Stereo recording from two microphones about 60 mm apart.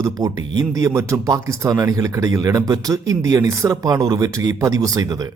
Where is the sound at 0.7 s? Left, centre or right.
Right.